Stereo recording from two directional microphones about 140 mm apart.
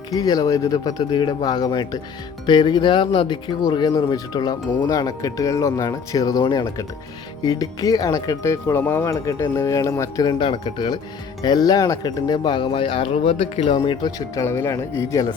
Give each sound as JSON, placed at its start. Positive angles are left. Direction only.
{"t": 0.1, "sound": "speech", "side_deg": 25}
{"t": 10.2, "sound": "speech", "side_deg": 35}
{"t": 14.4, "sound": "speech", "side_deg": 15}